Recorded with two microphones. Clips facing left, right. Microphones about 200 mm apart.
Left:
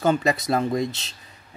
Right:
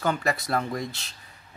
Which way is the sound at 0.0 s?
20° left (ahead or behind).